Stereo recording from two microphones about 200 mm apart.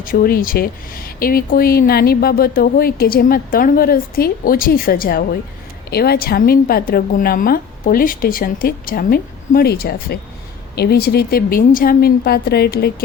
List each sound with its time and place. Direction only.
0.0 s speech: 45° left (ahead or behind)